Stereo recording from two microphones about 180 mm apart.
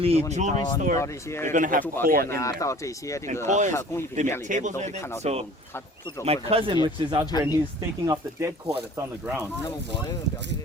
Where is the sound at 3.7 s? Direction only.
15° left (ahead or behind).